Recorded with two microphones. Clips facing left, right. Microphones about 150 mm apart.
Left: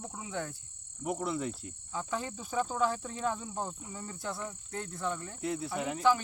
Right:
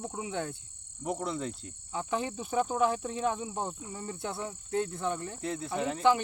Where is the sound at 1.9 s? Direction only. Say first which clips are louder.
Right 4 dB; 20° right (ahead or behind).